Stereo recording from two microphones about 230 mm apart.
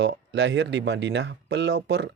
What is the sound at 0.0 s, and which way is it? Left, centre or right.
Speech, right.